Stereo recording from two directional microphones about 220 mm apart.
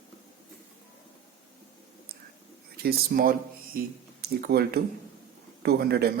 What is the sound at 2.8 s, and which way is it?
Speech, 45° right (ahead or behind).